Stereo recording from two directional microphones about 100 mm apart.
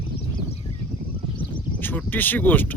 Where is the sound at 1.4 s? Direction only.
20° left (ahead or behind).